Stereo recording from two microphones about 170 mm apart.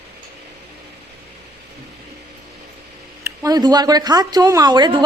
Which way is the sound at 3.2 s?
20° right (ahead or behind).